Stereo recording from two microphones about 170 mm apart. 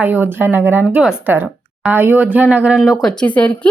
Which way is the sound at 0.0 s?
10° right (ahead or behind).